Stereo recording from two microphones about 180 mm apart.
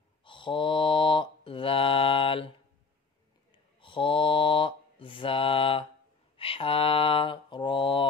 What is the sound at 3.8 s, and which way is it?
Mantra, 30° left (ahead or behind).